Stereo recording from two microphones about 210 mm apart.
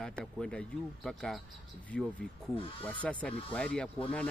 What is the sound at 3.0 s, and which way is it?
Speech, 5° left (ahead or behind).